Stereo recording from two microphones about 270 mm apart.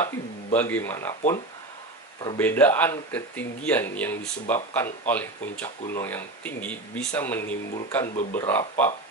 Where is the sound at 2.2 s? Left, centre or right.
Centre.